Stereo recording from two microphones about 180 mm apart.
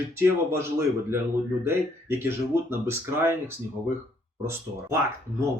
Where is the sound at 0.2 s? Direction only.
15° right (ahead or behind).